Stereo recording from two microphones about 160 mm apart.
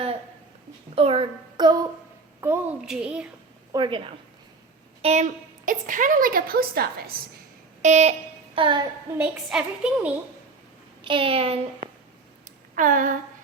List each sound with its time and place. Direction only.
0.9 s a child's voice: 35° right (ahead or behind)
2.4 s a woman's voice: 15° right (ahead or behind)
3.7 s a woman's voice: 30° right (ahead or behind)
5.0 s a woman's voice: 45° right (ahead or behind); by 6.8 s 70° right (ahead or behind)
7.8 s a sound: 45° right (ahead or behind)
8.5 s a child's voice: 30° right (ahead or behind)
9.1 s a woman's voice: 10° right (ahead or behind)
11.0 s a child's voice: 30° right (ahead or behind)
12.7 s a woman's voice: 55° right (ahead or behind)